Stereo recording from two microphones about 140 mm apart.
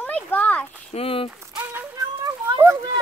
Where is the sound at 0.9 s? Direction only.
45° left (ahead or behind).